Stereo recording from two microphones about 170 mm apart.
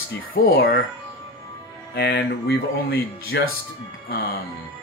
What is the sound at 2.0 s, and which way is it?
Speech, 70° left (ahead or behind).